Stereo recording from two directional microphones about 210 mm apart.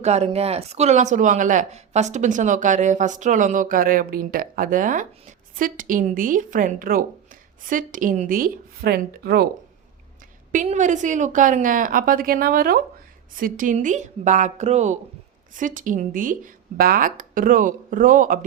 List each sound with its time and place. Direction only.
0.0 s speech: 30° right (ahead or behind); by 9.5 s 45° right (ahead or behind)
10.5 s speech: 35° right (ahead or behind)